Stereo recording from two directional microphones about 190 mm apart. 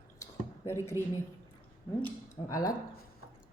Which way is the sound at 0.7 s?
15° left (ahead or behind).